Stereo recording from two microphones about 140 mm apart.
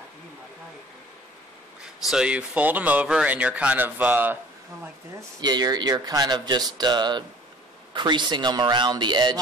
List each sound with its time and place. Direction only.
2.0 s speech: 5° right (ahead or behind)
5.4 s speech: 30° right (ahead or behind)